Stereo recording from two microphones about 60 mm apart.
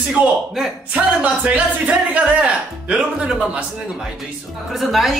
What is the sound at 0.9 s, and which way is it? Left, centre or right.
Speech, right.